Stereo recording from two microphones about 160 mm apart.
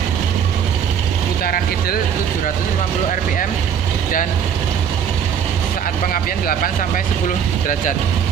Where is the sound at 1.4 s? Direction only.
65° left (ahead or behind).